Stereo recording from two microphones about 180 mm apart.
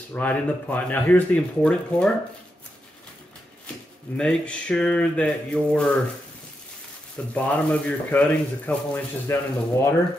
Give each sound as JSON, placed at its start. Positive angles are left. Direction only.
{"t": 0.1, "sound": "speech", "side_deg": 10}
{"t": 4.2, "sound": "a sound", "side_deg": 5}
{"t": 7.3, "sound": "speech", "side_deg": 5}